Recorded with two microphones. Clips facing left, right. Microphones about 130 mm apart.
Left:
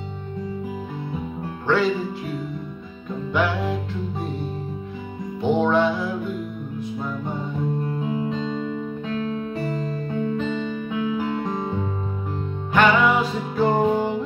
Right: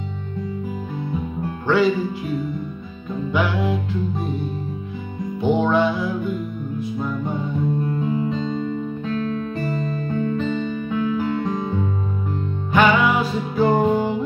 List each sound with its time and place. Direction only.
1.7 s music: 5° right (ahead or behind)
3.3 s music: 5° right (ahead or behind)
5.4 s music: 5° right (ahead or behind)
9.0 s music: 15° left (ahead or behind)
12.7 s music: 5° right (ahead or behind)